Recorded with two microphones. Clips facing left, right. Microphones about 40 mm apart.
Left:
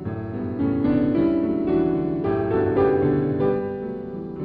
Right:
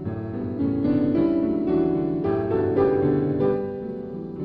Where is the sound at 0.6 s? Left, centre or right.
Left.